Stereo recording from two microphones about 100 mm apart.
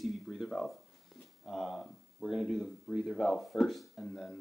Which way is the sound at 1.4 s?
Centre (ahead or behind).